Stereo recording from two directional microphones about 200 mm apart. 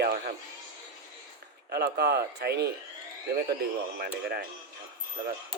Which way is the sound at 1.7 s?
55° right (ahead or behind).